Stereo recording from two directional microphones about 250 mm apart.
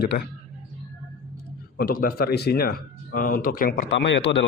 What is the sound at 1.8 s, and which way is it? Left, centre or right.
Speech, left.